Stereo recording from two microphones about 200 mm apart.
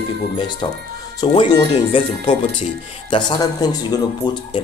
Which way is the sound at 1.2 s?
20° left (ahead or behind).